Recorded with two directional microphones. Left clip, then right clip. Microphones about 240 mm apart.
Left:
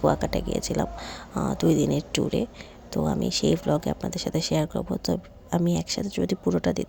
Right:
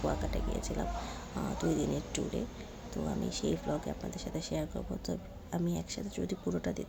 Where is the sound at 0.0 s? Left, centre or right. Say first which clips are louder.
Left 12 dB; left.